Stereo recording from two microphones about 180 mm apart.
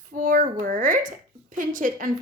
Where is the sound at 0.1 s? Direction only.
50° right (ahead or behind).